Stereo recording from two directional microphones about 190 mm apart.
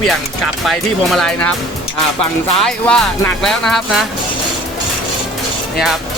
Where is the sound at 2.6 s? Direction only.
5° left (ahead or behind).